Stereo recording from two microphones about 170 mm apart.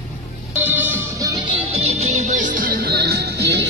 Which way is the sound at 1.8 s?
40° right (ahead or behind).